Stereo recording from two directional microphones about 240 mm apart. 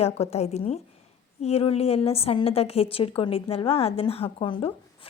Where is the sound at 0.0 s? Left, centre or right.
Left.